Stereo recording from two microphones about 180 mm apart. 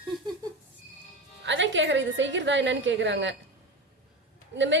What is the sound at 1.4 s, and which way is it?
A woman's voice, 90° right.